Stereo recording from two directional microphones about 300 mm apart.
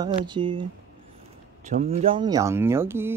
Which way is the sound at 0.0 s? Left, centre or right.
Centre.